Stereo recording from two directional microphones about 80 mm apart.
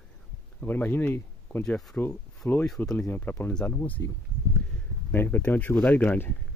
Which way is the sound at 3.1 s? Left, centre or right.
Left.